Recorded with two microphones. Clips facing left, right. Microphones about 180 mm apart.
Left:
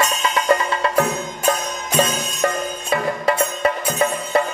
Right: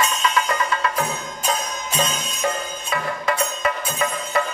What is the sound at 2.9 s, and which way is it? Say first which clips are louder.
Music: left 4 dB; 30° left (ahead or behind).